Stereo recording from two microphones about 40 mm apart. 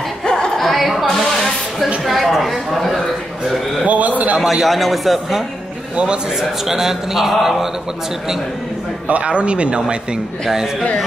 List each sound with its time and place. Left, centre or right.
0.2 s music: centre
0.6 s a sound: centre
3.8 s a sound: right
4.4 s a man's voice: centre
6.7 s mantra: centre
9.0 s speech: right